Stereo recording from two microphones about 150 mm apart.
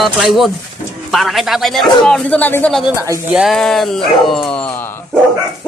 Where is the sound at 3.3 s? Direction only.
Centre (ahead or behind).